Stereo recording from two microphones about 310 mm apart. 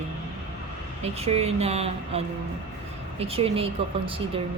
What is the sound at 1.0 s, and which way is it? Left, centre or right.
Speech, centre.